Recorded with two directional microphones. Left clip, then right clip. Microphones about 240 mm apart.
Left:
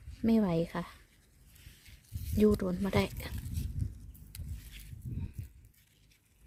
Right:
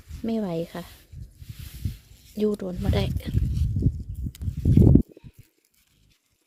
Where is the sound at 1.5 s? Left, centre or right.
Right.